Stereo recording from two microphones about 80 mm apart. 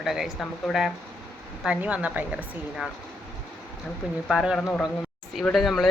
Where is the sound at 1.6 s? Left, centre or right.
Centre.